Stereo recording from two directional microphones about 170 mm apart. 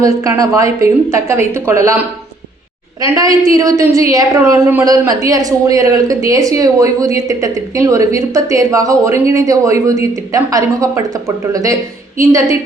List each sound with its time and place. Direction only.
0.0 s a woman's voice: 20° right (ahead or behind)